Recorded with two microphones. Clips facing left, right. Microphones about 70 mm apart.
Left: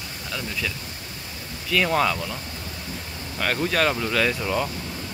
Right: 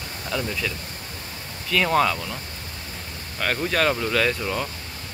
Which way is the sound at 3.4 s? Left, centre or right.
Centre.